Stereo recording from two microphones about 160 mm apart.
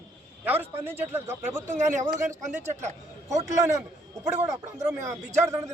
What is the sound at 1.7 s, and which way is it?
Speech, 50° right (ahead or behind).